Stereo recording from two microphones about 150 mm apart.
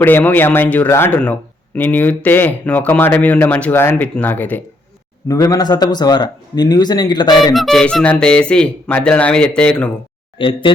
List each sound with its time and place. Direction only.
0.0 s speech: 15° left (ahead or behind)
5.3 s speech: 25° left (ahead or behind)
7.3 s speech: centre (ahead or behind)
10.3 s speech: 35° left (ahead or behind)